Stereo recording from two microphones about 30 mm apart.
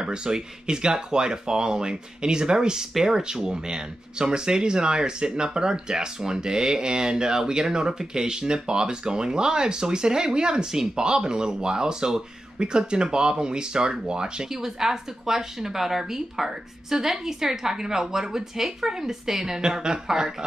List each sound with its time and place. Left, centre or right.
0.0 s speech: right
10.6 s a woman's voice: centre
11.0 s speech: right
14.5 s a woman's voice: centre